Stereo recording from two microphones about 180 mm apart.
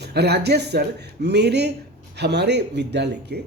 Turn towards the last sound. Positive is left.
turn(degrees=-70)  # may be behind; listen again after turning